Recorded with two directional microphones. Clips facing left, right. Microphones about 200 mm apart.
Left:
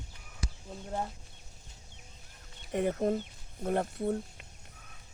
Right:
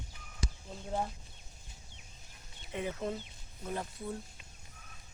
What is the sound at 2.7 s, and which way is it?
Speech, 50° left (ahead or behind).